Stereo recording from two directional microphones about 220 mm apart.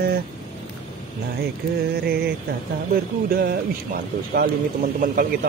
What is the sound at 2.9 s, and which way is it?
Mantra, 45° right (ahead or behind).